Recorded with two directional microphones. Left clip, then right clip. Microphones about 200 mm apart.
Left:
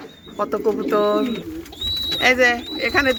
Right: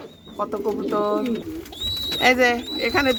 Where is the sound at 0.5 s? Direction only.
10° left (ahead or behind).